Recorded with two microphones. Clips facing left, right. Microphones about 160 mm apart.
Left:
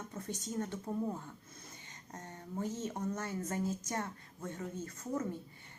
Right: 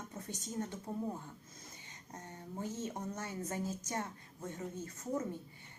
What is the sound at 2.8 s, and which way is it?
A woman's voice, 15° right (ahead or behind).